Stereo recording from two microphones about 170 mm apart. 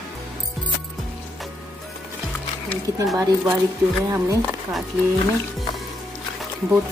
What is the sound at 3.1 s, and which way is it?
Speech, 20° right (ahead or behind).